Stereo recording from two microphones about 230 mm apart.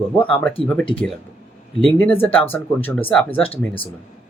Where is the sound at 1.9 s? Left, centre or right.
Centre.